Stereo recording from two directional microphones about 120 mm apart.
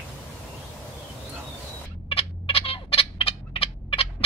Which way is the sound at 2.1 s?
55° left (ahead or behind).